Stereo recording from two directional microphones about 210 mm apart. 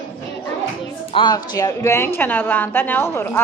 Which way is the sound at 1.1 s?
20° left (ahead or behind).